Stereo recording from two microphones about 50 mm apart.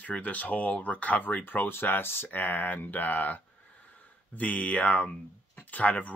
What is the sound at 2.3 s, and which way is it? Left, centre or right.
Speech, left.